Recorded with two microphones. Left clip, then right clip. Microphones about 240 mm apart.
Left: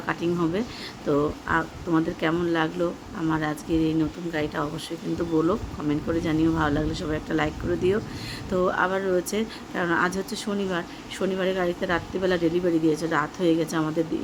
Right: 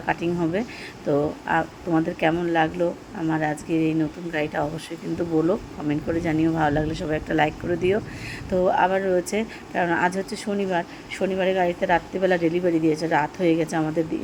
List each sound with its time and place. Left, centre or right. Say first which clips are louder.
0.0 s speech: right 2 dB; centre